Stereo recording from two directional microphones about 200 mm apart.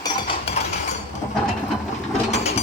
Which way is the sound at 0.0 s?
25° left (ahead or behind).